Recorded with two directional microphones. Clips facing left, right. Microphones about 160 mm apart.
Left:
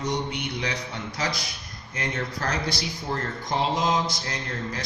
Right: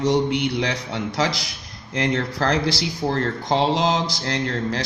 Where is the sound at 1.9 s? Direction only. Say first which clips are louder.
Right 8 dB; 75° right (ahead or behind).